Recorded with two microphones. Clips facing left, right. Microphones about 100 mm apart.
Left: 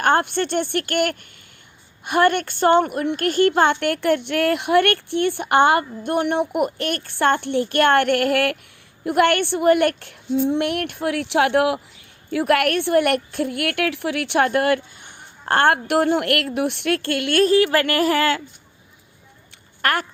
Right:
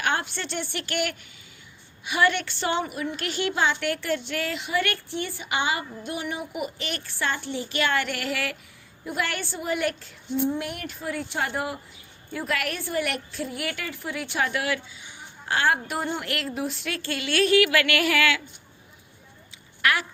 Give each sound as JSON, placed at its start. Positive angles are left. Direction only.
{"t": 0.0, "sound": "a woman's voice", "side_deg": 55}
{"t": 17.4, "sound": "speech", "side_deg": 35}
{"t": 19.8, "sound": "speech", "side_deg": 45}